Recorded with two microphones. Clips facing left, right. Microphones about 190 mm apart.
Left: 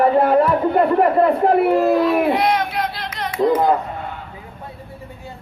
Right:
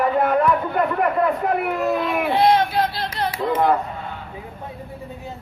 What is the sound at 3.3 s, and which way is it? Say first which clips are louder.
Speech: left 9 dB; 30° left (ahead or behind).